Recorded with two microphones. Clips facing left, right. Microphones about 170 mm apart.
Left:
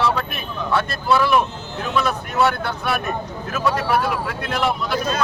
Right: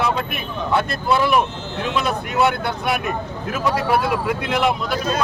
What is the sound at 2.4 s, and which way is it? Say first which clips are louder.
Speech: even; 15° right (ahead or behind).